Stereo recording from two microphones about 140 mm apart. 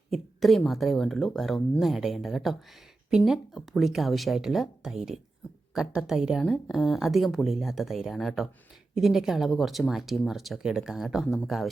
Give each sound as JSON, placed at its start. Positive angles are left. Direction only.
{"t": 0.1, "sound": "speech", "side_deg": 0}